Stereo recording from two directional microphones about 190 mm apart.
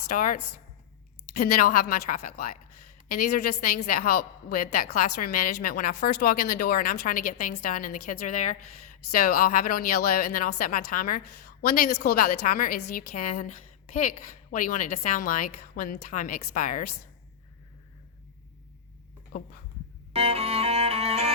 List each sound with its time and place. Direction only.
1.4 s a woman's voice: 50° left (ahead or behind)
19.3 s a woman's voice: 50° left (ahead or behind)
20.1 s music: 30° right (ahead or behind)